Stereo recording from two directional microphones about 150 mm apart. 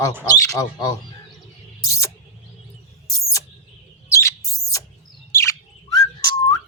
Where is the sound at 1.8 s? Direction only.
20° left (ahead or behind).